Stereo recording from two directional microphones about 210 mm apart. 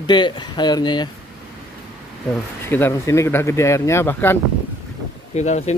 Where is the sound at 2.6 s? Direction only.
10° left (ahead or behind).